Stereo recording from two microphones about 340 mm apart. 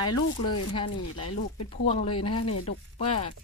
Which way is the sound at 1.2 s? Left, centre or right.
Left.